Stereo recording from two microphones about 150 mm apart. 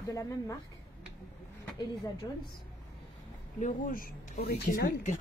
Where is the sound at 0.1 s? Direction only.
20° left (ahead or behind).